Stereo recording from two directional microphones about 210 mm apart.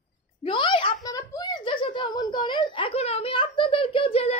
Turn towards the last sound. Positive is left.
turn(degrees=30)  # may be behind; listen again after turning